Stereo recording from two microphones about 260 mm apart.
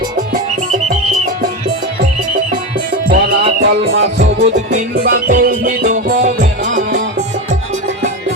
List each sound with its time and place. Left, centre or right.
3.1 s music: right
4.0 s music: right